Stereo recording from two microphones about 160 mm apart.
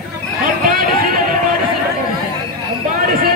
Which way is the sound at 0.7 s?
65° right (ahead or behind).